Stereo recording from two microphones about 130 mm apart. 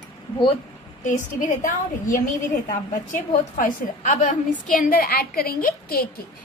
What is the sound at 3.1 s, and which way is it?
A woman's voice, 75° left (ahead or behind).